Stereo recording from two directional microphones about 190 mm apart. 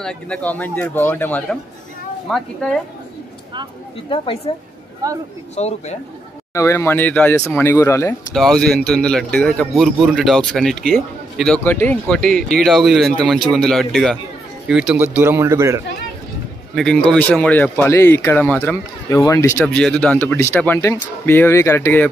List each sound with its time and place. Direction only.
0.0 s speech: 5° left (ahead or behind)
4.5 s speech: 30° left (ahead or behind)
5.0 s speech: 20° right (ahead or behind)
5.6 s speech: 35° left (ahead or behind)
6.5 s speech: 15° left (ahead or behind)
8.3 s speech: centre (ahead or behind); by 15.8 s 15° right (ahead or behind)
16.7 s speech: 5° left (ahead or behind)